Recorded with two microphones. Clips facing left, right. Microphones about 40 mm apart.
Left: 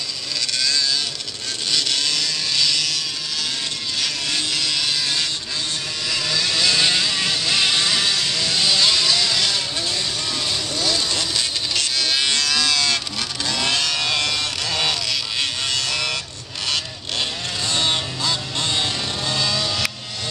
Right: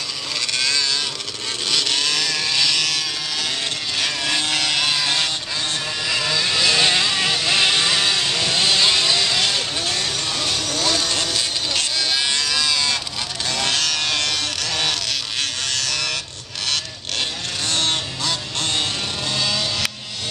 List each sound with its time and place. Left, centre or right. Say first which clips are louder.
0.6 s vehicle: even; right
4.0 s vehicle: right 3 dB; right
10.4 s vehicle: right 2 dB; right
11.3 s insect: right 1 dB; right
12.4 s livestock: left 1 dB; right
13.5 s vehicle: even; right
15.9 s a sound: left 1 dB; left
16.6 s vehicle: even; right
18.2 s music: left 1 dB; right
19.3 s vehicle: even; right